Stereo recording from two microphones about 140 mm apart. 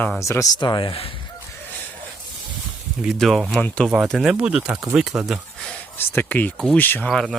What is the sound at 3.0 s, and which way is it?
Speech, centre (ahead or behind).